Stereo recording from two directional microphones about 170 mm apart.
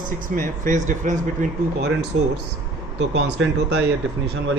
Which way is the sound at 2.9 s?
90° right.